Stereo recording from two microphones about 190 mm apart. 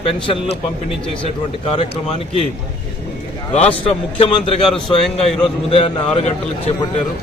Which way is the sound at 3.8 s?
30° left (ahead or behind).